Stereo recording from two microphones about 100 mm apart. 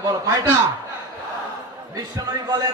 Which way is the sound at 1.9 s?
40° right (ahead or behind).